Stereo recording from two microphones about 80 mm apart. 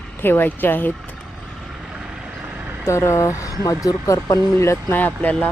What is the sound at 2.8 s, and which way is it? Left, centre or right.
Speech, left.